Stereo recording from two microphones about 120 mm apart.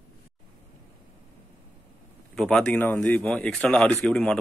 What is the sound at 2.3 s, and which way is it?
Speech, 5° left (ahead or behind).